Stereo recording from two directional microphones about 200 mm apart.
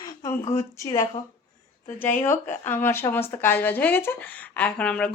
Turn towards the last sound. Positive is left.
turn(degrees=5)  # may be behind; listen again after turning